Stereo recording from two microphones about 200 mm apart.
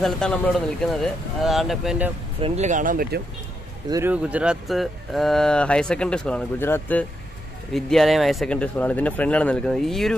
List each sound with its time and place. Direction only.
0.0 s speech: 5° left (ahead or behind)
2.4 s speech: 35° right (ahead or behind)
3.9 s speech: 10° right (ahead or behind)